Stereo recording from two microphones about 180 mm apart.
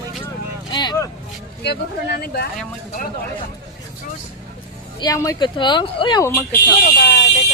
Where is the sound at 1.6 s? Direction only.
65° left (ahead or behind).